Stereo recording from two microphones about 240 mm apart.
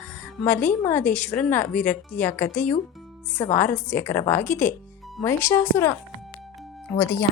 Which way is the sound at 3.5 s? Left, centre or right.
Centre.